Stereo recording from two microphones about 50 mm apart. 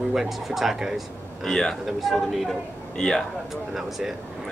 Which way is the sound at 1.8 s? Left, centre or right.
Centre.